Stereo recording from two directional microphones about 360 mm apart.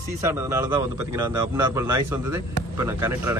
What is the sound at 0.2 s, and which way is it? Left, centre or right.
Speech, centre.